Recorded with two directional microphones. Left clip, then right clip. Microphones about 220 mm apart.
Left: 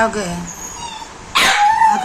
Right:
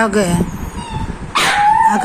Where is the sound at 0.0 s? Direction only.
15° right (ahead or behind).